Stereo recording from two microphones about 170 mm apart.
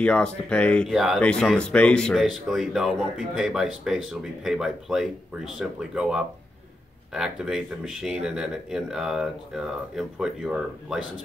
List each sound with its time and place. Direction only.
0.0 s speech: 5° left (ahead or behind)